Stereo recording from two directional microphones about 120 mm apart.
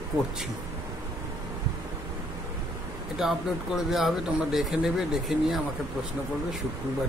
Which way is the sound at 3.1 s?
5° right (ahead or behind).